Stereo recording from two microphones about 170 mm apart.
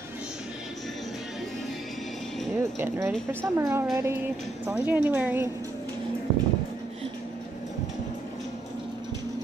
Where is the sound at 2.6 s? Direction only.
15° right (ahead or behind).